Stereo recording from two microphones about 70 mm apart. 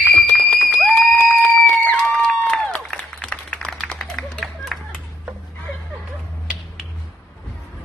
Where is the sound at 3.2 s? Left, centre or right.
Centre.